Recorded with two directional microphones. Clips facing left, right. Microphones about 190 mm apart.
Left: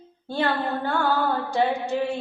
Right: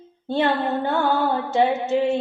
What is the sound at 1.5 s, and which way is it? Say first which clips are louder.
Female singing: right 5 dB; 20° right (ahead or behind).